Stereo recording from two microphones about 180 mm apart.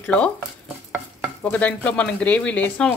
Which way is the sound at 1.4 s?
5° left (ahead or behind).